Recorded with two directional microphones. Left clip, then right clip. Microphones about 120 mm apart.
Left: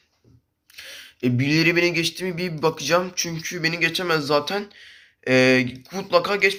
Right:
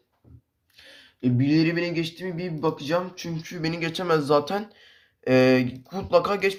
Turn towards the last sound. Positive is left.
turn(degrees=-15)  # may be behind; listen again after turning